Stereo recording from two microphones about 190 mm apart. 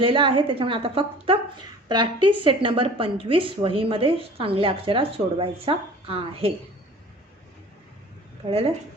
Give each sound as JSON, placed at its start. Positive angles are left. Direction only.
{"t": 0.0, "sound": "a woman's voice", "side_deg": -25}
{"t": 8.4, "sound": "a woman's voice", "side_deg": -30}